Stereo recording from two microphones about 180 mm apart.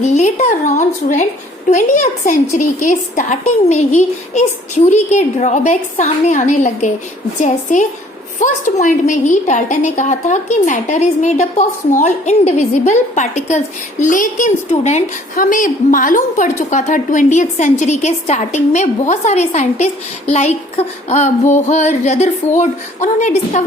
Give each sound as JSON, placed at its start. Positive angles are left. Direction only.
{"t": 0.0, "sound": "a woman's voice", "side_deg": 40}